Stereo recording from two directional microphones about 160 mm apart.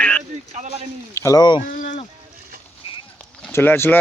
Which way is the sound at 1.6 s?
50° left (ahead or behind).